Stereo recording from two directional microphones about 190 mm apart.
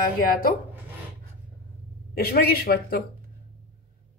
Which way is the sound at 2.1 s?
55° left (ahead or behind).